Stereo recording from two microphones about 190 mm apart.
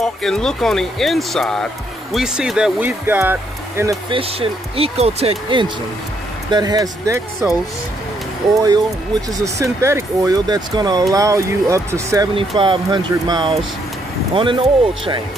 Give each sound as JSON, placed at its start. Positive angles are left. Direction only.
{"t": 0.0, "sound": "speech", "side_deg": 0}
{"t": 4.1, "sound": "speech", "side_deg": -30}
{"t": 8.5, "sound": "speech", "side_deg": -20}